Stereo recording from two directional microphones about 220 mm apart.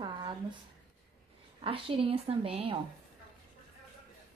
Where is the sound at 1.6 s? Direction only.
25° right (ahead or behind).